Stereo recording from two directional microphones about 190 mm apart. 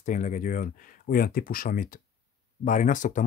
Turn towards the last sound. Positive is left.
turn(degrees=40)  # may be behind; listen again after turning